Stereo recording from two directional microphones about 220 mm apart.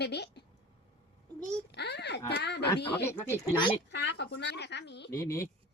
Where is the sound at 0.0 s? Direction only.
50° left (ahead or behind).